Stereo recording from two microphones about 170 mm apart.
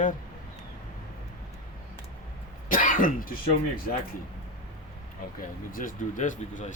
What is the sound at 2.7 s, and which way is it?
Cough, 50° left (ahead or behind).